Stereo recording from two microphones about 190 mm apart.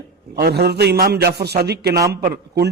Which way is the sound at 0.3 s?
60° right (ahead or behind).